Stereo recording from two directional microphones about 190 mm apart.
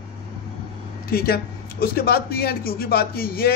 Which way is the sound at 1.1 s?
55° left (ahead or behind).